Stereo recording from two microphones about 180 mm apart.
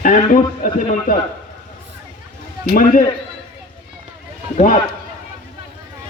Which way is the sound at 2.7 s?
50° left (ahead or behind).